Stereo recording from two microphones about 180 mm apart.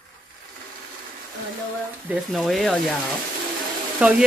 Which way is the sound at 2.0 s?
5° right (ahead or behind).